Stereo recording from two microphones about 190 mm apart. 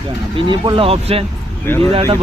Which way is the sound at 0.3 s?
25° right (ahead or behind).